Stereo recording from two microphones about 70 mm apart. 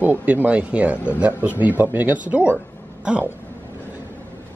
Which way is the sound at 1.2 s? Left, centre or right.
Right.